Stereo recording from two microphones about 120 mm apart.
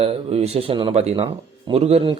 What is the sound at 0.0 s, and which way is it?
A man's voice, 60° right (ahead or behind).